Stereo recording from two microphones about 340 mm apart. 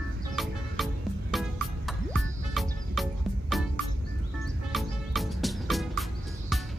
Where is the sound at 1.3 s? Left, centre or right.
Centre.